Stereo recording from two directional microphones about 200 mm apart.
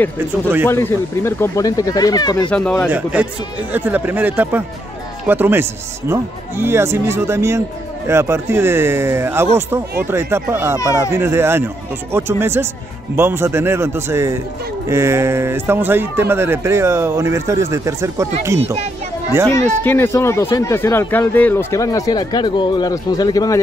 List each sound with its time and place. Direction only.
0.7 s speech: 10° left (ahead or behind)
2.5 s speech: 5° left (ahead or behind)
2.9 s speech: 5° right (ahead or behind)
19.5 s speech: 10° left (ahead or behind)